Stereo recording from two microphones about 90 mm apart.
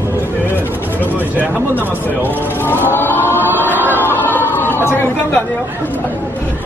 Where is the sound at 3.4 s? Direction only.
25° right (ahead or behind).